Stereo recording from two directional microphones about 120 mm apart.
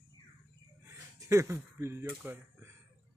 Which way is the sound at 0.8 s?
20° right (ahead or behind).